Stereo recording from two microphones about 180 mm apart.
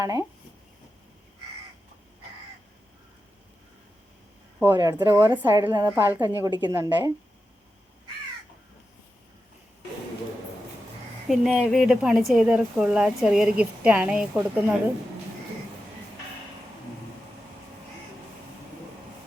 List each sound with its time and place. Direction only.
0.0 s a woman's voice: 15° right (ahead or behind)
4.6 s a woman's voice: 15° right (ahead or behind)
11.3 s speech: centre (ahead or behind)